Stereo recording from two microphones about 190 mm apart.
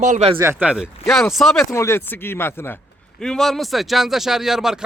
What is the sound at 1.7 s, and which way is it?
Speech, 15° left (ahead or behind).